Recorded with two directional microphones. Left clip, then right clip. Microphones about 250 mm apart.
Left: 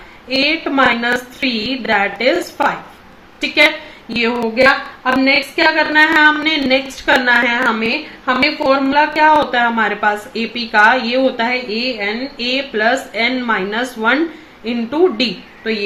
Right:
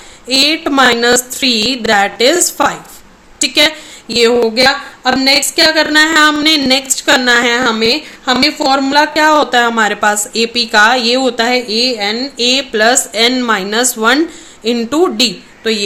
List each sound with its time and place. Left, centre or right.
0.3 s a woman's voice: right